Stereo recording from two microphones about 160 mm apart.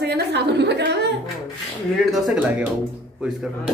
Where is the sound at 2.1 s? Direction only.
5° right (ahead or behind).